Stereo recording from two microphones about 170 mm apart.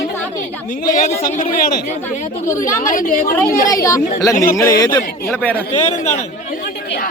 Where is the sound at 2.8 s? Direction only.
55° left (ahead or behind).